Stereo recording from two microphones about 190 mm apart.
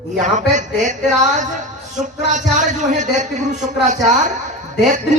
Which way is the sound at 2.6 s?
40° right (ahead or behind).